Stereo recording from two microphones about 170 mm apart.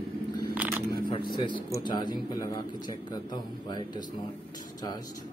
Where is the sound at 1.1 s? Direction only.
30° left (ahead or behind).